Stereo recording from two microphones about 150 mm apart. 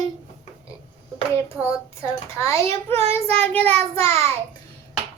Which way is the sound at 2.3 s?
20° left (ahead or behind).